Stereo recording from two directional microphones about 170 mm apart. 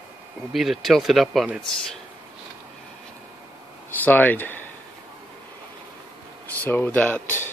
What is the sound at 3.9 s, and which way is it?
Speech, 10° left (ahead or behind).